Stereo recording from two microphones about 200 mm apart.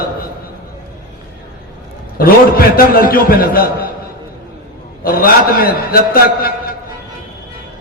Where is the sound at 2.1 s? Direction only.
45° left (ahead or behind).